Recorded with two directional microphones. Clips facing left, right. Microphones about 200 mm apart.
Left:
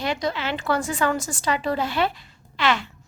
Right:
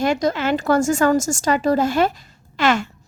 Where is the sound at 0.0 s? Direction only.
45° right (ahead or behind).